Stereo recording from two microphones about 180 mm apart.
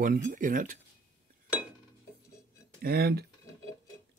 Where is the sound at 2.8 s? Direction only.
60° right (ahead or behind).